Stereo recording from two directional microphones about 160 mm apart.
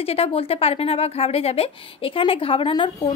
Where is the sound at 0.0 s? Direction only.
35° left (ahead or behind).